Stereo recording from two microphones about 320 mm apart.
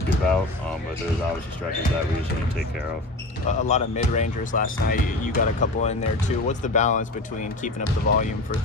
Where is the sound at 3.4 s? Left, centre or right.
Left.